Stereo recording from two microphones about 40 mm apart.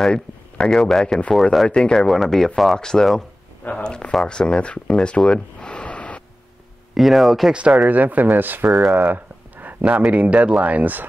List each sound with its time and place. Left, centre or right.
0.7 s speech: centre
1.7 s speech: left
2.0 s speech: centre
2.8 s speech: centre
4.9 s a sound: left
6.9 s speech: centre
7.5 s speech: right
7.9 s speech: right
8.6 s speech: centre
8.9 s a sound: right
9.8 s speech: right